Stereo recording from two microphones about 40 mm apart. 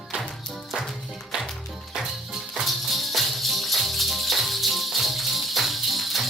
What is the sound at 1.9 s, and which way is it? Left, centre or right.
Music, centre.